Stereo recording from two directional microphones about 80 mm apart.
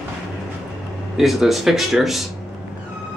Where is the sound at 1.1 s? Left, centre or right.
Centre.